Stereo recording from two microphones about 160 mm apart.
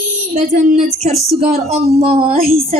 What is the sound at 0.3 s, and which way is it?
A woman's voice, 45° right (ahead or behind).